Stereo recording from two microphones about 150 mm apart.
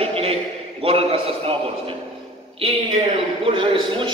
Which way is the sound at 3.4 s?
35° right (ahead or behind).